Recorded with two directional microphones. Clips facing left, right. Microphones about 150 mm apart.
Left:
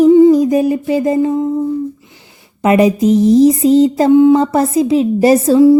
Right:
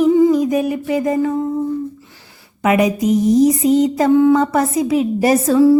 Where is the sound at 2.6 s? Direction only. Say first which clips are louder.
Left 4 dB; 30° left (ahead or behind).